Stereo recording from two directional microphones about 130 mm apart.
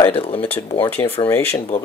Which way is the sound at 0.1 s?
50° left (ahead or behind).